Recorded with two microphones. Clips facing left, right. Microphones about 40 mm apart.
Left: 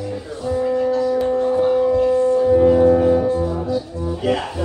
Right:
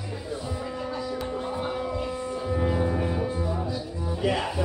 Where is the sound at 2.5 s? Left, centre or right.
Centre.